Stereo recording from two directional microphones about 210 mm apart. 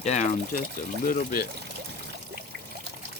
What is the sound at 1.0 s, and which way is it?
Speech, 45° left (ahead or behind).